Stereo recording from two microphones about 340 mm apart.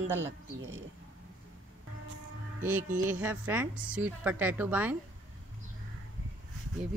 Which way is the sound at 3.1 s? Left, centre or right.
Centre.